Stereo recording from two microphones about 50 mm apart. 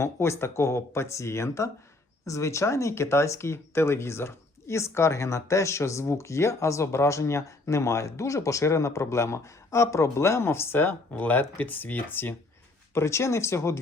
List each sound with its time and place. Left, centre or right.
0.0 s speech: left
11.2 s speech: left
12.9 s speech: left